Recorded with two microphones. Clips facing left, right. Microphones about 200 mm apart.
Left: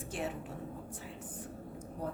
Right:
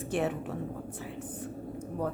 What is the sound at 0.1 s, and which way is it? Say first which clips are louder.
Speech: right 8 dB; 65° right (ahead or behind).